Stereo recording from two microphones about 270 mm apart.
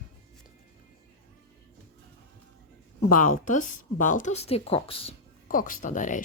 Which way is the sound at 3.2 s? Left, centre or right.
Left.